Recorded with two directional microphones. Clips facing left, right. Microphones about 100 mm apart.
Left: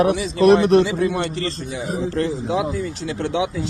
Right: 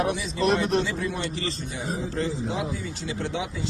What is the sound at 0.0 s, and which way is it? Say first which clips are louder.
A man's voice: left 9 dB; 75° left (ahead or behind).